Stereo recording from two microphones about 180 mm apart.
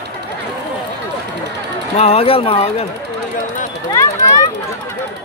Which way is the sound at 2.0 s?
35° left (ahead or behind).